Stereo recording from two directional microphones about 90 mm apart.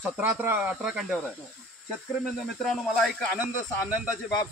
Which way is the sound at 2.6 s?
5° left (ahead or behind).